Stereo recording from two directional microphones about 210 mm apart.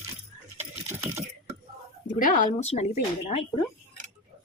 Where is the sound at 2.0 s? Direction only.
40° left (ahead or behind).